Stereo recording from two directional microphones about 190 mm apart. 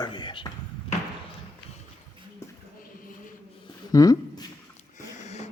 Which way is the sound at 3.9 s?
20° left (ahead or behind).